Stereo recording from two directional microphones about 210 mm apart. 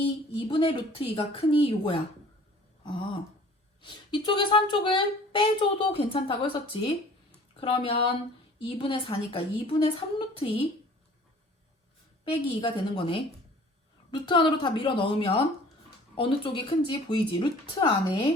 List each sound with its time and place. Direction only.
0.3 s a woman's voice: 25° left (ahead or behind)
12.2 s a woman's voice: 25° left (ahead or behind)